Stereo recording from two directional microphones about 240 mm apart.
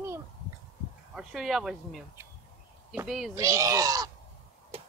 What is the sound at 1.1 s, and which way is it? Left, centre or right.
Speech, centre.